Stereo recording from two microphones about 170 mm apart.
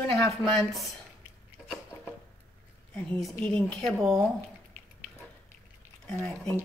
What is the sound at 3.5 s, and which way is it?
Speech, 5° left (ahead or behind).